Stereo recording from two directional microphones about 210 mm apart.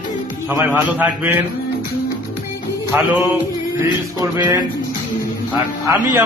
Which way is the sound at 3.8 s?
15° right (ahead or behind).